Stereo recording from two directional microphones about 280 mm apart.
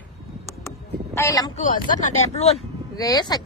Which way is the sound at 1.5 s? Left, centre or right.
Left.